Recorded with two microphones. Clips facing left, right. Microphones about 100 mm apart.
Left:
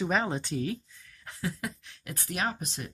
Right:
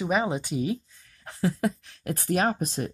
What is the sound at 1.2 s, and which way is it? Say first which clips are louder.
Speech: right 9 dB; 35° right (ahead or behind).